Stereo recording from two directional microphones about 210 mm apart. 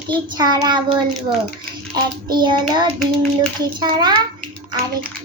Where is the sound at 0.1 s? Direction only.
20° right (ahead or behind).